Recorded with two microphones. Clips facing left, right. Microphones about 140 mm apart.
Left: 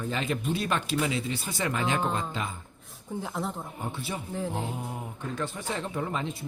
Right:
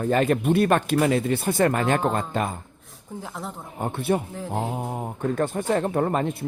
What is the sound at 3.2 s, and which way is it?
Speech, centre (ahead or behind).